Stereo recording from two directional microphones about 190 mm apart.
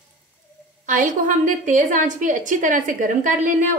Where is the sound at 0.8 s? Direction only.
45° right (ahead or behind).